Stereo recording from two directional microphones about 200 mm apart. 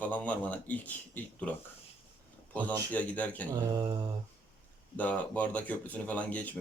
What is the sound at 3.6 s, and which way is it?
Mantra, 20° right (ahead or behind).